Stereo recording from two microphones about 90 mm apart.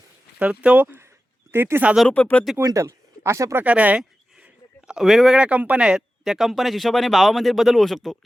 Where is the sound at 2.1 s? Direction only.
15° left (ahead or behind).